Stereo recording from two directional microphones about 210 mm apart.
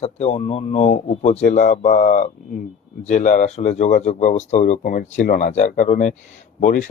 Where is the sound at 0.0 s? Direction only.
30° left (ahead or behind).